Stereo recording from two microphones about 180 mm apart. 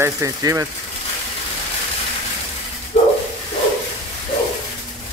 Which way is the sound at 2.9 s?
40° left (ahead or behind).